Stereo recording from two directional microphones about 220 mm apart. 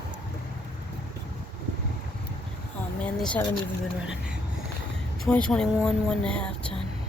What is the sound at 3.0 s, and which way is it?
Speech, 5° left (ahead or behind).